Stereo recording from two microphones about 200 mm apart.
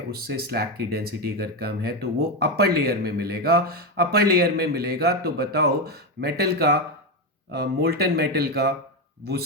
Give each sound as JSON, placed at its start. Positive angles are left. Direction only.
{"t": 0.1, "sound": "speech", "side_deg": -50}